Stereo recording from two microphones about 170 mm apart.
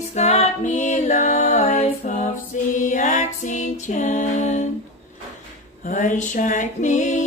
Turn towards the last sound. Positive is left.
turn(degrees=50)  # may be behind; listen again after turning